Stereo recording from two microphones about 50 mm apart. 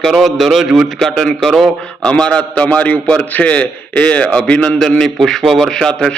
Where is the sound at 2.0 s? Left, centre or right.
Left.